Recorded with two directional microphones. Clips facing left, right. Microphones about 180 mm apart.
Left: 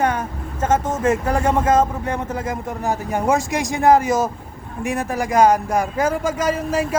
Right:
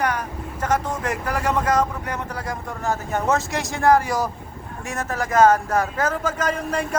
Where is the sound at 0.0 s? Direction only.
25° left (ahead or behind).